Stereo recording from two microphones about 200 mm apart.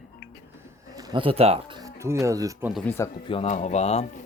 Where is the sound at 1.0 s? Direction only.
20° right (ahead or behind).